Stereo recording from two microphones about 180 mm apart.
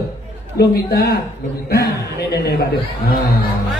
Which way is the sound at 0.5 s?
60° left (ahead or behind).